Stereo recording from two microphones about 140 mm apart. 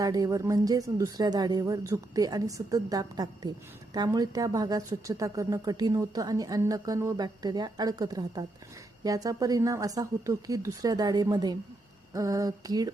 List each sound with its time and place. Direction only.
0.0 s a woman's voice: 25° right (ahead or behind)